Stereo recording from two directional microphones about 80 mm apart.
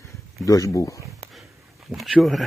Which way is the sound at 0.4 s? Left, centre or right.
Left.